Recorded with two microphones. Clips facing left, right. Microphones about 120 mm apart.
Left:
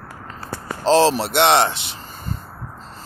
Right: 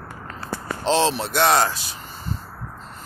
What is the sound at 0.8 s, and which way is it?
Speech, 35° left (ahead or behind).